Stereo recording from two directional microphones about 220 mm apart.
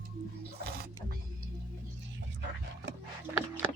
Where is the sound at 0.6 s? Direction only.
45° right (ahead or behind).